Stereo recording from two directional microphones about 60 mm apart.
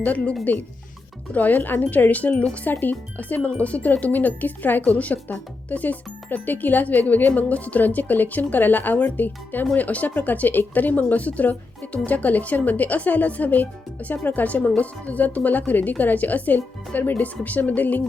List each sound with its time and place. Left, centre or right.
0.0 s speech: left